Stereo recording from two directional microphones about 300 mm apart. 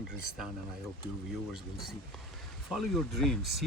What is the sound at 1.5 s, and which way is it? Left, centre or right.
Speech, centre.